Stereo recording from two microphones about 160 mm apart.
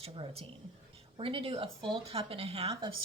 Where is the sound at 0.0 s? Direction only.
35° right (ahead or behind).